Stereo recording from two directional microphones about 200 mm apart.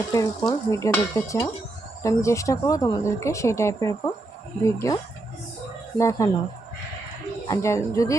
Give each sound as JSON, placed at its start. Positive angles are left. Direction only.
{"t": 0.1, "sound": "speech", "side_deg": 15}
{"t": 6.0, "sound": "speech", "side_deg": 15}
{"t": 7.4, "sound": "speech", "side_deg": 15}